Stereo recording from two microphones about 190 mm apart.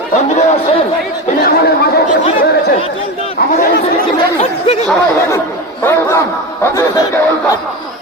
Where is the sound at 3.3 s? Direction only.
50° left (ahead or behind).